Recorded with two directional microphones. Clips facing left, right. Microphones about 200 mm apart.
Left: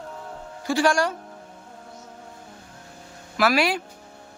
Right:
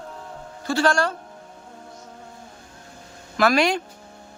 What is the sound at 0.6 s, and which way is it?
Speech, 15° left (ahead or behind).